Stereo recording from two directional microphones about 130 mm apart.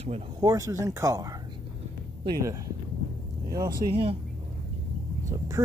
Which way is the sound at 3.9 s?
45° right (ahead or behind).